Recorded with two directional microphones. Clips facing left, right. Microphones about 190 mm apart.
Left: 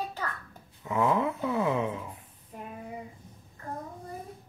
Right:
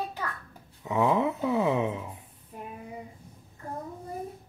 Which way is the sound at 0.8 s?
20° right (ahead or behind).